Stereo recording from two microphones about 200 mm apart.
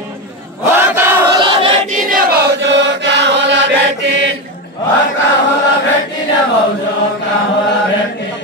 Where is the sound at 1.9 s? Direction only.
45° right (ahead or behind); by 3.6 s 60° right (ahead or behind).